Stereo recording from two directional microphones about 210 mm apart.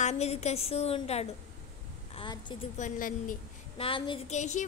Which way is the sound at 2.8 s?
40° left (ahead or behind).